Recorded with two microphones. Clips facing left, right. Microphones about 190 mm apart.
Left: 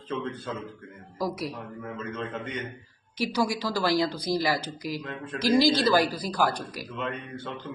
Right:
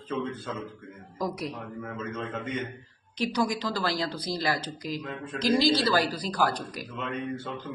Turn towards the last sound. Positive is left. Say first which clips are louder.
# right 1 dB
turn(degrees=-5)  # may be behind; listen again after turning